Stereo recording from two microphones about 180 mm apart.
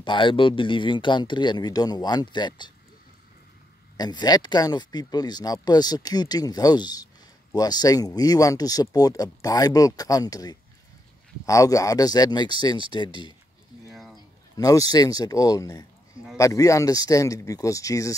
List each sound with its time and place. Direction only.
0.0 s speech: 25° left (ahead or behind)
3.9 s speech: 25° left (ahead or behind)
13.8 s a sound: centre (ahead or behind)
14.6 s speech: 20° left (ahead or behind)